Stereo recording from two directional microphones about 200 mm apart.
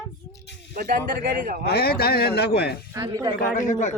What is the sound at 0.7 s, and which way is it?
Speech, 45° right (ahead or behind).